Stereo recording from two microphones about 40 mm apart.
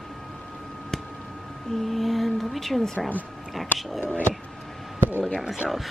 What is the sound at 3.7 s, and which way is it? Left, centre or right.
Speech, left.